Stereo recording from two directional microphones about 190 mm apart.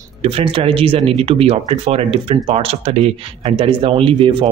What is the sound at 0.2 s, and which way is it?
Speech, 30° right (ahead or behind).